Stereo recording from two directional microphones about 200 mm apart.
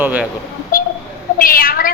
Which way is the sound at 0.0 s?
10° right (ahead or behind).